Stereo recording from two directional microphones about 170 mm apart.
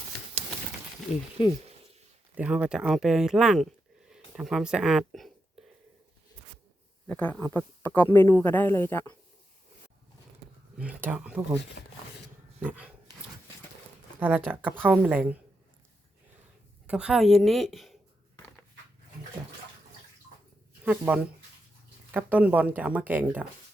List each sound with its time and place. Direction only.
2.3 s speech: 5° right (ahead or behind)
7.1 s speech: 10° left (ahead or behind)
10.8 s speech: 10° right (ahead or behind)
11.8 s speech: 70° left (ahead or behind)
12.6 s speech: 10° right (ahead or behind)
14.2 s speech: 10° right (ahead or behind)
16.8 s speech: 5° right (ahead or behind)
20.8 s speech: 10° right (ahead or behind)